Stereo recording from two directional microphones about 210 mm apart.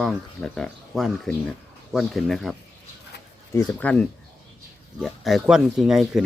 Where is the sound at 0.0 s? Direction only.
5° left (ahead or behind).